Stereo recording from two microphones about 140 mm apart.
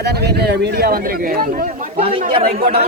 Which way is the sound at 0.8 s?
90° right.